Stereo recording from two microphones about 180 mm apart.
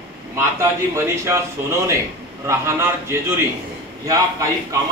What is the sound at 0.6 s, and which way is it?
Speech, 15° right (ahead or behind).